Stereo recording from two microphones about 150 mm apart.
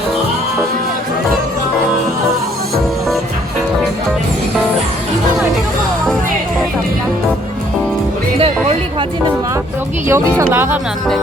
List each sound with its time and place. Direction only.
10.1 s speech: 20° right (ahead or behind)